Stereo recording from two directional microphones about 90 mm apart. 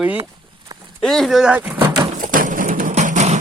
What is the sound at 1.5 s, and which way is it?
Speech, 15° right (ahead or behind).